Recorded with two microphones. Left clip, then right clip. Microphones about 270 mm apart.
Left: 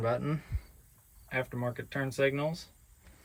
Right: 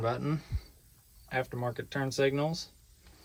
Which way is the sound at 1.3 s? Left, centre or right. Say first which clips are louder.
Right 1 dB; centre.